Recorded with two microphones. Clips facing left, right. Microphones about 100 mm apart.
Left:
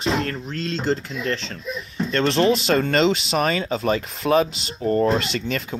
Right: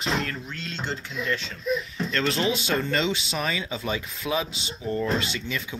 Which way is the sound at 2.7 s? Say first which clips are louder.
Left 7 dB; 65° left (ahead or behind).